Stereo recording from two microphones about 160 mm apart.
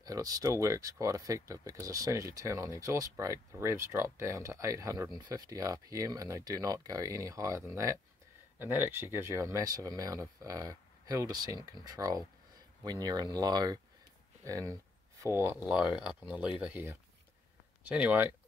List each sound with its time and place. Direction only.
0.0 s speech: 20° right (ahead or behind)